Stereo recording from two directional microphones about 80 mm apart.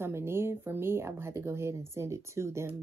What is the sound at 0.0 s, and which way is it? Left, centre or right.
Speech, right.